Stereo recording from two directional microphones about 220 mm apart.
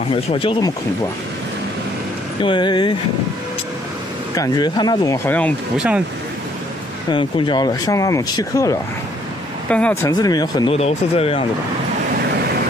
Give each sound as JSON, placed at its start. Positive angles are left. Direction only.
{"t": 0.1, "sound": "speech", "side_deg": 25}
{"t": 2.4, "sound": "speech", "side_deg": 20}
{"t": 4.4, "sound": "speech", "side_deg": 20}
{"t": 5.8, "sound": "speech", "side_deg": -5}
{"t": 7.1, "sound": "speech", "side_deg": 20}
{"t": 9.7, "sound": "speech", "side_deg": 5}
{"t": 10.1, "sound": "speech", "side_deg": 20}